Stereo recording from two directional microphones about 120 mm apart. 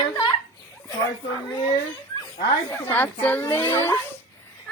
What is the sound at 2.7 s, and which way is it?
A child's voice, 15° left (ahead or behind).